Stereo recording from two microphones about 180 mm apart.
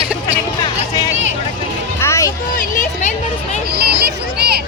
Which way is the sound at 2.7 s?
40° left (ahead or behind).